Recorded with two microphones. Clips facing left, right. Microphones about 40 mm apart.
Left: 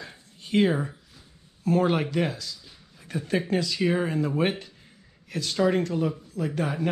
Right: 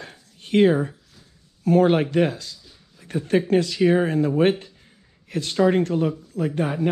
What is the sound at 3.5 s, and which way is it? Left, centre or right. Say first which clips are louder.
Speech: right 7 dB; right.